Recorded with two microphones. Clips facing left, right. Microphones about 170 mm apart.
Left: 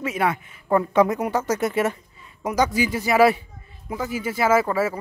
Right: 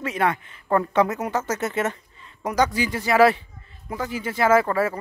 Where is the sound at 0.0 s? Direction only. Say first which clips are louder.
Even; 10° left (ahead or behind).